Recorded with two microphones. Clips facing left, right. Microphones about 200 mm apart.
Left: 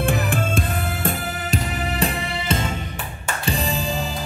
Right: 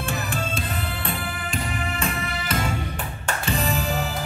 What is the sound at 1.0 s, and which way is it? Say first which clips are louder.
Music: left 4 dB; 40° left (ahead or behind).